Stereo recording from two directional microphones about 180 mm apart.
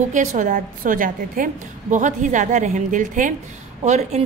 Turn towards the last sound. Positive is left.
turn(degrees=-40)  # may be behind; listen again after turning